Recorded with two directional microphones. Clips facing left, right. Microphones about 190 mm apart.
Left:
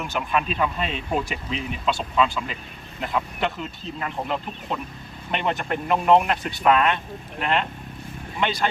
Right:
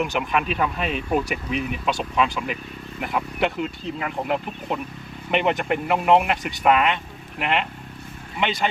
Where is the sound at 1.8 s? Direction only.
15° right (ahead or behind).